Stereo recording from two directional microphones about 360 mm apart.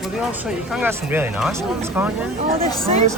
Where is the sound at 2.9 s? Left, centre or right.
Centre.